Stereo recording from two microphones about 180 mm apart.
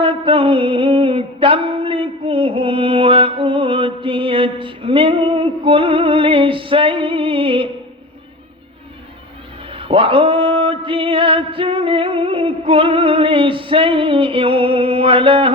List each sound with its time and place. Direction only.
0.0 s music: 30° right (ahead or behind)
9.7 s music: 30° right (ahead or behind)